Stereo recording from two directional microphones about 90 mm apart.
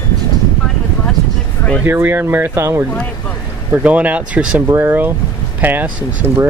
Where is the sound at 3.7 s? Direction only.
15° right (ahead or behind).